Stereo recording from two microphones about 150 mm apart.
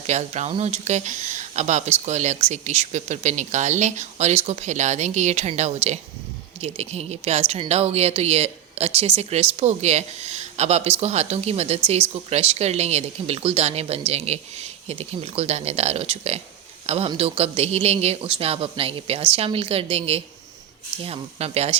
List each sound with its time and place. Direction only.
0.1 s a man's voice: 50° right (ahead or behind)